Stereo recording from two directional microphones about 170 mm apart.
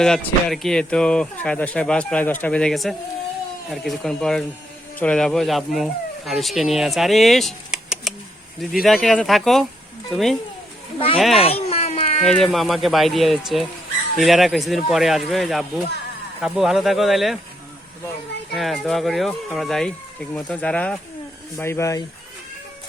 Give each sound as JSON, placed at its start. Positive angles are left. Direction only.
{"t": 0.0, "sound": "speech", "side_deg": 5}
{"t": 11.3, "sound": "a sound", "side_deg": 35}
{"t": 12.2, "sound": "speech", "side_deg": 5}
{"t": 18.5, "sound": "speech", "side_deg": 0}